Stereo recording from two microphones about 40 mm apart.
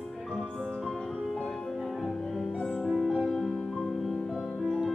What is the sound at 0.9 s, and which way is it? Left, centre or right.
Music, centre.